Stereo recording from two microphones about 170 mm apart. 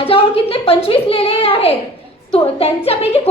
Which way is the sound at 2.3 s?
35° left (ahead or behind).